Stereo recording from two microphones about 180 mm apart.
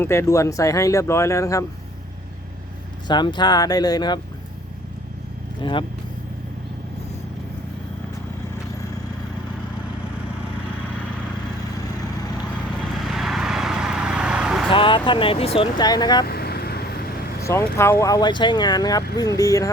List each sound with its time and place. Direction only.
0.0 s speech: 15° left (ahead or behind)
3.1 s speech: 25° left (ahead or behind)
5.6 s speech: 25° left (ahead or behind)
12.8 s vehicle: centre (ahead or behind)
14.7 s speech: 30° left (ahead or behind)
16.2 s vehicle: 60° left (ahead or behind)
17.4 s speech: 15° left (ahead or behind)